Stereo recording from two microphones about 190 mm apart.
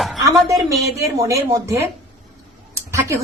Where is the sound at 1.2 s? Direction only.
15° right (ahead or behind).